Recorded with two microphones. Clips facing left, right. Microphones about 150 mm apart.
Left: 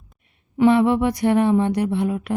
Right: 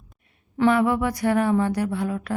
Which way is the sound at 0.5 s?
20° left (ahead or behind).